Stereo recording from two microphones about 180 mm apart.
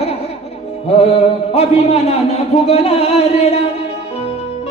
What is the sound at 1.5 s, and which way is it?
A man's voice, 35° left (ahead or behind).